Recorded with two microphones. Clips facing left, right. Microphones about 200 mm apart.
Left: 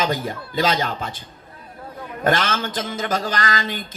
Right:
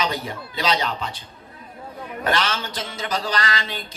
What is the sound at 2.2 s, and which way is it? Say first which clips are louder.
A woman's voice: left 3 dB; 45° left (ahead or behind).